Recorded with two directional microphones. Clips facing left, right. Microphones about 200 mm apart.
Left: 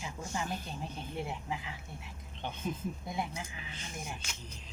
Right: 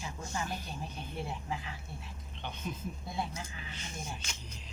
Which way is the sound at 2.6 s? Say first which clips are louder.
Left 3 dB; 40° left (ahead or behind).